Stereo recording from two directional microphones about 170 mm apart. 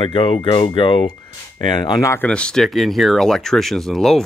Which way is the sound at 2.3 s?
5° left (ahead or behind).